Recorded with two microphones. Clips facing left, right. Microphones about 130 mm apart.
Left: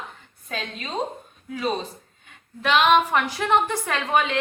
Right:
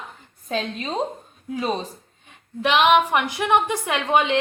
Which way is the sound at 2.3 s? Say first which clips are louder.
Right 1 dB; 20° right (ahead or behind).